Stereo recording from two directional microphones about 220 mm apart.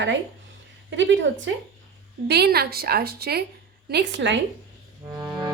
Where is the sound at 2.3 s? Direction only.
45° right (ahead or behind).